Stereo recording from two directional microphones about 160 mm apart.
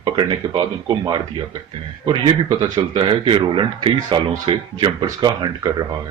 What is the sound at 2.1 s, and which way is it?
Speech, 30° right (ahead or behind).